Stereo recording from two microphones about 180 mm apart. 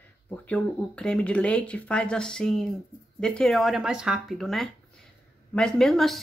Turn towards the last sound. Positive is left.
turn(degrees=0)  # may be behind; listen again after turning